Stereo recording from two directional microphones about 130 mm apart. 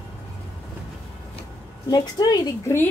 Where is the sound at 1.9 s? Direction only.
30° left (ahead or behind).